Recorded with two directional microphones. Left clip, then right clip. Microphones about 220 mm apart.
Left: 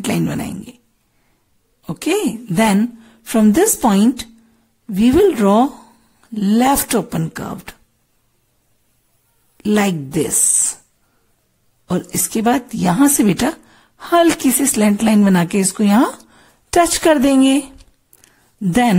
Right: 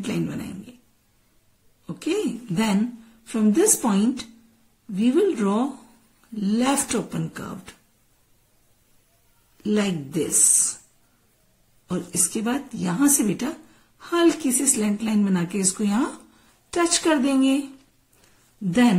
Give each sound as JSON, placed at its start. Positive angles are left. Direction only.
{"t": 1.9, "sound": "a woman's voice", "side_deg": 40}
{"t": 9.6, "sound": "a woman's voice", "side_deg": 40}
{"t": 11.9, "sound": "a woman's voice", "side_deg": 35}
{"t": 18.7, "sound": "a woman's voice", "side_deg": 40}